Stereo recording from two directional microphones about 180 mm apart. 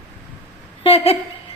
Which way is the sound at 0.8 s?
30° left (ahead or behind).